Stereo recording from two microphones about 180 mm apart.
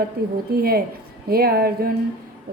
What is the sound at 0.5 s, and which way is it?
A woman's voice, 60° right (ahead or behind).